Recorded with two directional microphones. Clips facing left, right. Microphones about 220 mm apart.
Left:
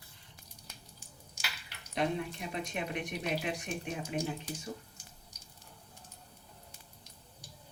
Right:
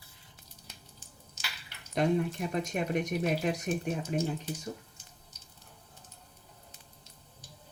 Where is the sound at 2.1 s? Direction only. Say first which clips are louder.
Right 7 dB; 45° right (ahead or behind).